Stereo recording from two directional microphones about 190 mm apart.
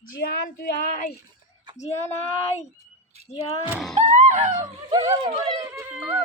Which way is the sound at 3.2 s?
35° right (ahead or behind).